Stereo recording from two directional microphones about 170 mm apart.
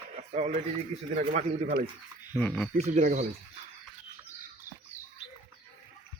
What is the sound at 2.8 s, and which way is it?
Speech, 45° right (ahead or behind).